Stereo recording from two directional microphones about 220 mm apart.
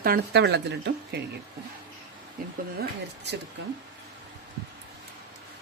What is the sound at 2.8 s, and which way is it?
Speech, 50° right (ahead or behind).